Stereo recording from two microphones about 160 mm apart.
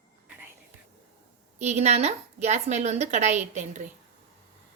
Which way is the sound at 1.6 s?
45° right (ahead or behind).